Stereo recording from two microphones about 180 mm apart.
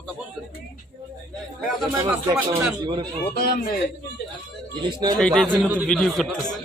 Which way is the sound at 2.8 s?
25° right (ahead or behind).